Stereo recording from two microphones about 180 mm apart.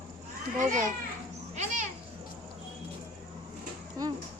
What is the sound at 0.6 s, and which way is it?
Speech, 45° right (ahead or behind).